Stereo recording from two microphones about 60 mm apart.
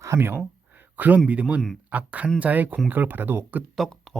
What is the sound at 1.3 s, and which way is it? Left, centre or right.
Speech, right.